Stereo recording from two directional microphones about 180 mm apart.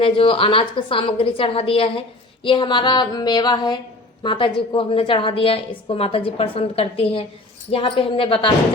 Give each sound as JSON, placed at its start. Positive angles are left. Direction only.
{"t": 0.0, "sound": "a woman's voice", "side_deg": 30}